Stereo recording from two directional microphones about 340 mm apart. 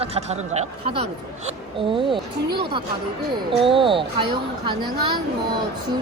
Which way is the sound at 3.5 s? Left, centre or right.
Centre.